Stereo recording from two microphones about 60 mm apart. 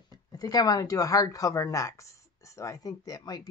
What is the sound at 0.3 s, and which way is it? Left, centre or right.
Speech, left.